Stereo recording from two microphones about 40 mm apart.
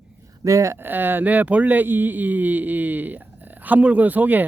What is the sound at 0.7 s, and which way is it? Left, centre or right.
Speech, right.